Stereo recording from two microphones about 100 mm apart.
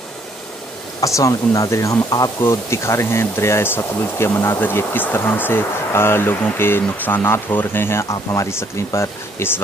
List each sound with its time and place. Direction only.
1.0 s speech: 35° left (ahead or behind)
2.4 s speech: 30° left (ahead or behind)